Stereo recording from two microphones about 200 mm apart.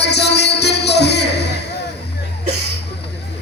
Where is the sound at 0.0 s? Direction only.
55° left (ahead or behind).